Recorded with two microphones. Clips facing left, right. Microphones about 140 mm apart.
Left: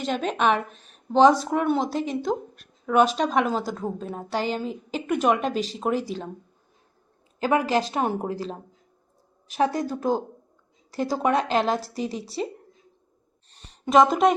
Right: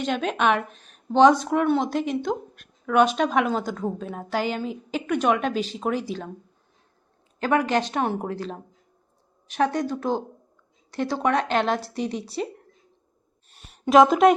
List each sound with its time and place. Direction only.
0.0 s a woman's voice: centre (ahead or behind)
5.5 s speech: 40° left (ahead or behind)
5.7 s a woman's voice: centre (ahead or behind)
7.3 s a woman's voice: 5° left (ahead or behind)
9.7 s a woman's voice: 5° left (ahead or behind)
13.5 s a sound: 5° right (ahead or behind)